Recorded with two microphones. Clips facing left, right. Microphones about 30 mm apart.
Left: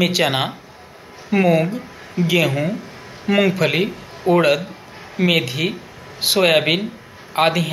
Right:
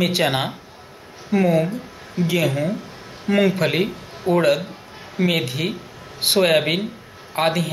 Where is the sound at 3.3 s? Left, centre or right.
Left.